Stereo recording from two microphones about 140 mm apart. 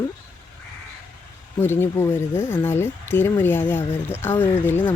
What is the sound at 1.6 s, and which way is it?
Speech, 15° left (ahead or behind).